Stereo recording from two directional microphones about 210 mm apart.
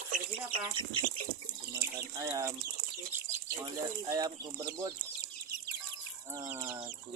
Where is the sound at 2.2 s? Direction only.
15° right (ahead or behind).